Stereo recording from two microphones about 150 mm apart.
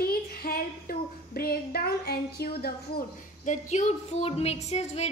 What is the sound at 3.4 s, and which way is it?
A woman's voice, 50° left (ahead or behind).